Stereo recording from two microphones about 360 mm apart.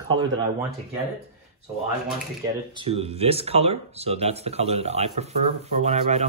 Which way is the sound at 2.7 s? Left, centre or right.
Centre.